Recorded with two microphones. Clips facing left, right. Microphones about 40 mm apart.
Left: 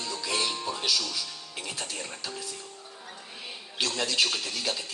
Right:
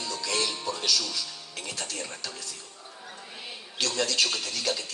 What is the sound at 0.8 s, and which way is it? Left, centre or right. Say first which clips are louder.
Speech: even; centre.